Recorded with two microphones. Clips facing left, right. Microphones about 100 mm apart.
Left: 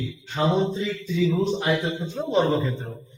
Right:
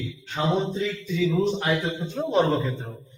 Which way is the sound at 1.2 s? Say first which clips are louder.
Even; centre (ahead or behind).